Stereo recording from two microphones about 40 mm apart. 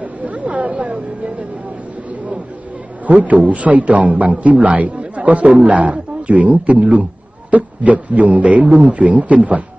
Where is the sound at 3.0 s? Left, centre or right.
Right.